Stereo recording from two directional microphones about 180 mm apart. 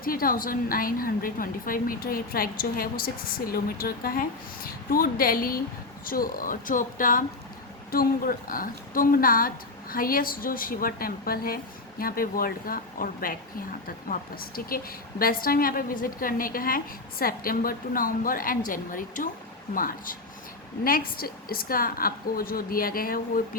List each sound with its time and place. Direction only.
0.0 s a woman's voice: 55° left (ahead or behind)